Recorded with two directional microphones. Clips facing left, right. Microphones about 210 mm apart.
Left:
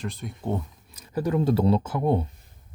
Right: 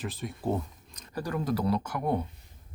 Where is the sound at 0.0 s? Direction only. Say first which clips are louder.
Even; centre (ahead or behind).